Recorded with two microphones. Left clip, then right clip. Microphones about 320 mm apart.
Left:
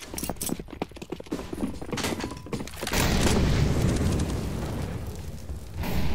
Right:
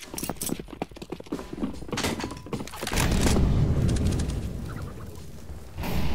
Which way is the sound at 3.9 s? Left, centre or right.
Centre.